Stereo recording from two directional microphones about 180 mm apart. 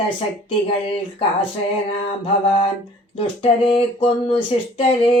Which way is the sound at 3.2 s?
30° left (ahead or behind).